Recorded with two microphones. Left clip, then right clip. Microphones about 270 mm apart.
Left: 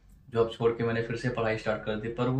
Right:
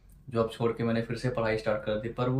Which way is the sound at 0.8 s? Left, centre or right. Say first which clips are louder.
Left 1 dB; centre.